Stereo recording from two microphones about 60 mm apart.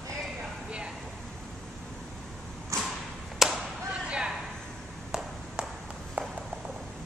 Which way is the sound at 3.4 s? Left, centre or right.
Centre.